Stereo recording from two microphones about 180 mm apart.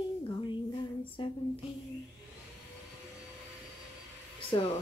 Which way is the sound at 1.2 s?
25° left (ahead or behind).